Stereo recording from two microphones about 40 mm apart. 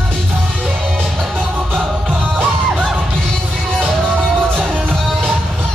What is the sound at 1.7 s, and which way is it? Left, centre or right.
Music, right.